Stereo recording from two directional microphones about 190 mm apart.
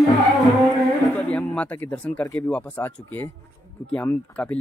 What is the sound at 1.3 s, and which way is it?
Speech, 5° left (ahead or behind).